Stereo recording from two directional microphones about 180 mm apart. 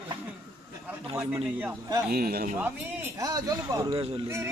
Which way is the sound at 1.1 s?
15° right (ahead or behind).